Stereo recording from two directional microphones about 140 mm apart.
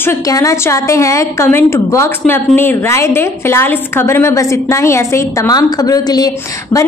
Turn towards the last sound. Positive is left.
turn(degrees=25)  # may be behind; listen again after turning